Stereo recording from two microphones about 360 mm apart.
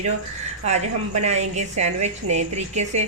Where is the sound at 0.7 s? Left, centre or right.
Centre.